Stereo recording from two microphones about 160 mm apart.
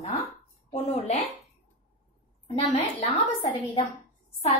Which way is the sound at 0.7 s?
40° left (ahead or behind).